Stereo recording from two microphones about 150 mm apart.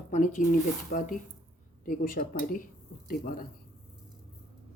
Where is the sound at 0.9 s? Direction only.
70° left (ahead or behind).